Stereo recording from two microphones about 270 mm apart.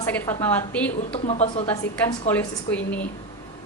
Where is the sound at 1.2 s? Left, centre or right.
Left.